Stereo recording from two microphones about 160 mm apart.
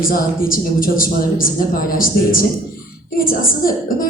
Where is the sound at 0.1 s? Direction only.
60° left (ahead or behind).